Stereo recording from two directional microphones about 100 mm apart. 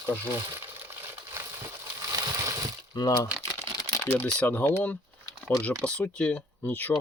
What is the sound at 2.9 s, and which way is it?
Speech, 40° left (ahead or behind).